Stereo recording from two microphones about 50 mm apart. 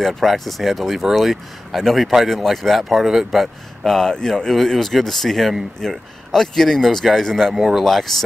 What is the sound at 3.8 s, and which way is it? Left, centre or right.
Speech, centre.